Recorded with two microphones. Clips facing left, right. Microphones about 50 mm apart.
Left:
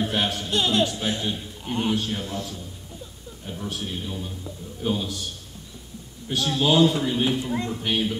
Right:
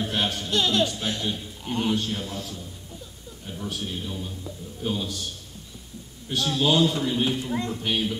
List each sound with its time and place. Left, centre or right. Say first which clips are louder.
0.0 s speech: left 2 dB; centre
0.5 s speech: even; left
0.8 s a man's voice: left 2 dB; centre
6.2 s a man's voice: left 1 dB; centre